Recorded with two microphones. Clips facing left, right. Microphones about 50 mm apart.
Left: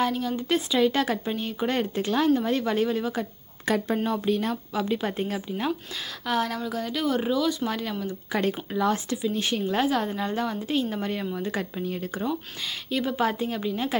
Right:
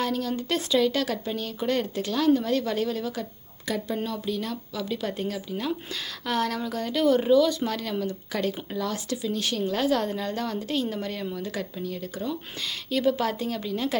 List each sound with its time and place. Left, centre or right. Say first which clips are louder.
0.0 s speech: left 2 dB; centre
3.7 s speech: left 4 dB; left
6.2 s speech: even; centre; by 9.9 s left
9.9 s a woman's voice: even; centre; by 12.3 s left
12.9 s a woman's voice: right 1 dB; centre